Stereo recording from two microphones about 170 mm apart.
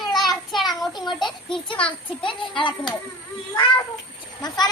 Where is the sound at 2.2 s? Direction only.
30° left (ahead or behind).